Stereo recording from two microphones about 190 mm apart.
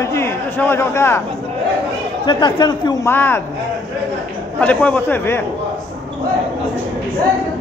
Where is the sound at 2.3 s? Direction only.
25° left (ahead or behind).